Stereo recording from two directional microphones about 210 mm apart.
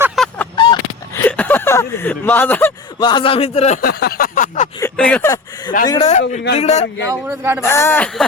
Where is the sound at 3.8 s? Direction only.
50° left (ahead or behind).